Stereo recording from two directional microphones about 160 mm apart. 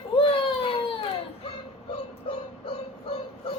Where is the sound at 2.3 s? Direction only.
35° left (ahead or behind).